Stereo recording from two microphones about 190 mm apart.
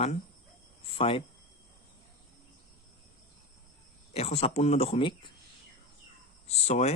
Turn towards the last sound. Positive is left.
turn(degrees=35)  # may be behind; listen again after turning